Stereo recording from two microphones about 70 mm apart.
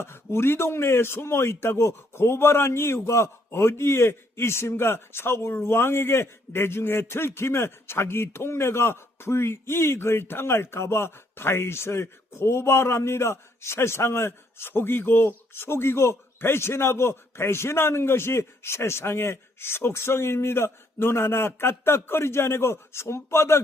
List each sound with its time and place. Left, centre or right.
0.0 s a man's voice: left